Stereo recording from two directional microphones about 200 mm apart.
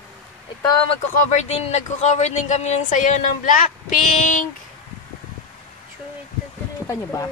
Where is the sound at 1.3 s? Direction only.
35° left (ahead or behind).